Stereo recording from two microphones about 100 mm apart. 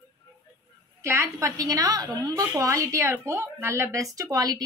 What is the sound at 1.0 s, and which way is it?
A woman's voice, 30° right (ahead or behind).